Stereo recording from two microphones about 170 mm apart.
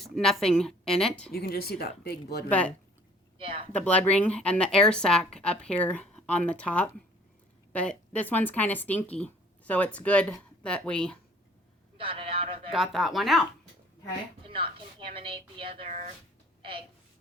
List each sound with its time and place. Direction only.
0.0 s a woman's voice: centre (ahead or behind)
1.3 s speech: 65° left (ahead or behind)
2.5 s speech: 10° left (ahead or behind)
3.3 s speech: 30° right (ahead or behind)
3.7 s speech: 10° left (ahead or behind)
11.9 s a sound: 30° right (ahead or behind)
12.7 s speech: centre (ahead or behind)
14.4 s a woman's voice: 30° right (ahead or behind)
15.9 s speech: 45° right (ahead or behind)